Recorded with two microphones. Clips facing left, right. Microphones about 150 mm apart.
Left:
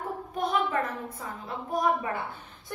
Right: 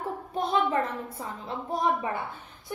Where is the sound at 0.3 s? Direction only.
30° right (ahead or behind).